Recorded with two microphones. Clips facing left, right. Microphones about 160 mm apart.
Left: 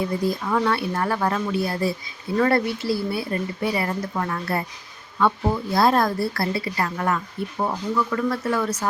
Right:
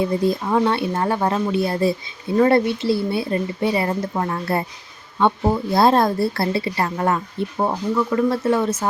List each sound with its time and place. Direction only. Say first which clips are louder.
0.3 s a woman's voice: right 2 dB; 25° right (ahead or behind)